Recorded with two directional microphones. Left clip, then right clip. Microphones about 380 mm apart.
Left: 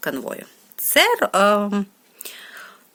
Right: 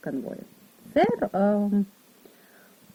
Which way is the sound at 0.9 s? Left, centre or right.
Centre.